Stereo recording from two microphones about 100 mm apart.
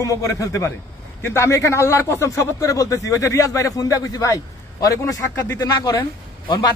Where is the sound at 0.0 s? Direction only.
35° left (ahead or behind).